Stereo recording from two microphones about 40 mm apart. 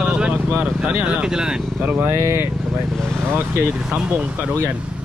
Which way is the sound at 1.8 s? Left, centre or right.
Right.